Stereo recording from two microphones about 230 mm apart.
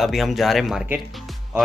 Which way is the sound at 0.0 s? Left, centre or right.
Centre.